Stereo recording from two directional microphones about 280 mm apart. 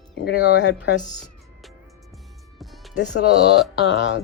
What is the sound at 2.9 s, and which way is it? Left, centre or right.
Speech, left.